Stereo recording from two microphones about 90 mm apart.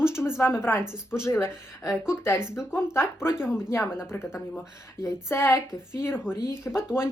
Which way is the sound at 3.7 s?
25° left (ahead or behind).